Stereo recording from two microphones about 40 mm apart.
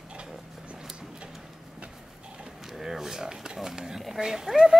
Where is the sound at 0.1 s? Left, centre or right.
Right.